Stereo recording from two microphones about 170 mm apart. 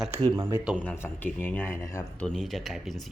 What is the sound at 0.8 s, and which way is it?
A man's voice, 10° left (ahead or behind).